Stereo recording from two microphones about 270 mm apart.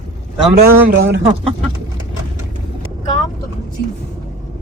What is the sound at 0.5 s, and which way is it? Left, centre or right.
Speech, right.